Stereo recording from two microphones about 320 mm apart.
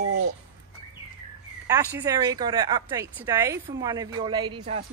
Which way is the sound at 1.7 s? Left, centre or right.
Centre.